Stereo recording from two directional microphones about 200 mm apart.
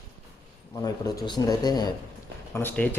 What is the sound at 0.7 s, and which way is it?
Speech, 20° left (ahead or behind).